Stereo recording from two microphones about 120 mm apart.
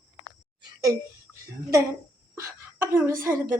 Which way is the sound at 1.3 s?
25° right (ahead or behind).